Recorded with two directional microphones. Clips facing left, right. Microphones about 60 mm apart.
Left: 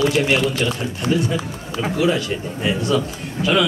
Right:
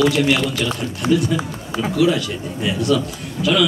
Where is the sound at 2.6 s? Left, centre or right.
Left.